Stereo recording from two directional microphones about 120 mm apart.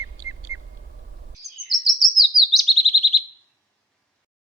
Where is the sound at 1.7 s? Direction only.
Centre (ahead or behind).